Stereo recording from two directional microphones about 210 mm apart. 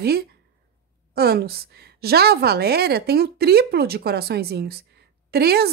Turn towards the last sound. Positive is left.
turn(degrees=-50)  # may be behind; listen again after turning